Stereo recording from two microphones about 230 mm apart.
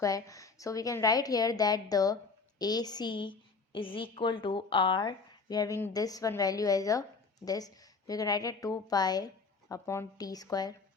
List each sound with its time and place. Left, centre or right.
0.0 s a woman's voice: centre